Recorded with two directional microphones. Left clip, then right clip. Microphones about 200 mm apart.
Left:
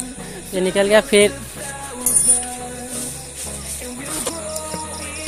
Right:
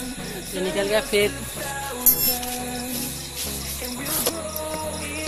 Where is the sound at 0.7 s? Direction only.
50° left (ahead or behind).